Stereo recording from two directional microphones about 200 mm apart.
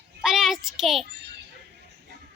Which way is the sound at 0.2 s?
Centre (ahead or behind).